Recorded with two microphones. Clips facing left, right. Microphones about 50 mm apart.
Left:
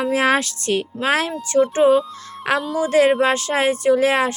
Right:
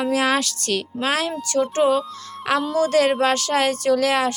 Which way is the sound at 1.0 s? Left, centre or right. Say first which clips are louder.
Left 3 dB; left.